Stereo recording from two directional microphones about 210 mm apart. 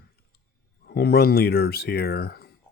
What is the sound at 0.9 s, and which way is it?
Speech, 50° left (ahead or behind).